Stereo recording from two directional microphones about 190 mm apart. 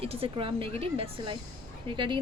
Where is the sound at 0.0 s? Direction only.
30° right (ahead or behind).